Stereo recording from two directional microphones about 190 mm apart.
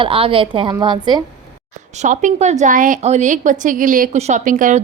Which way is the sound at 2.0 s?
40° right (ahead or behind).